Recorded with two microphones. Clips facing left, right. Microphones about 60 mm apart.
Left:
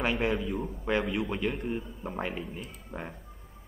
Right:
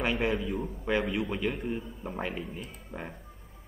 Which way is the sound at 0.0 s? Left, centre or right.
Centre.